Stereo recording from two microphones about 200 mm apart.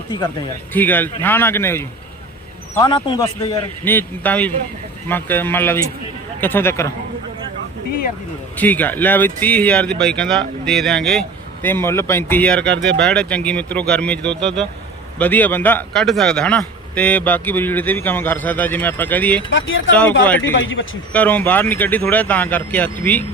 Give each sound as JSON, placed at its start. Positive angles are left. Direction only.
{"t": 0.7, "sound": "a man's voice", "side_deg": 10}
{"t": 2.7, "sound": "a man's voice", "side_deg": 20}
{"t": 8.5, "sound": "a man's voice", "side_deg": 10}
{"t": 19.5, "sound": "speech", "side_deg": 75}
{"t": 20.2, "sound": "a man's voice", "side_deg": 10}
{"t": 20.6, "sound": "speech", "side_deg": 70}
{"t": 21.1, "sound": "a man's voice", "side_deg": 5}